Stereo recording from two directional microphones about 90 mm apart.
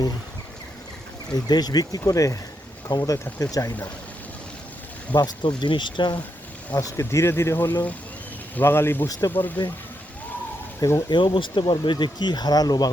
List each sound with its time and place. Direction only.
1.3 s speech: 50° left (ahead or behind)
2.9 s speech: 55° left (ahead or behind)
3.2 s speech: 20° left (ahead or behind)
5.1 s speech: 50° left (ahead or behind)
6.7 s speech: 35° left (ahead or behind)
10.8 s speech: 30° left (ahead or behind)
11.1 s speech: 65° left (ahead or behind); by 12.9 s 45° left (ahead or behind)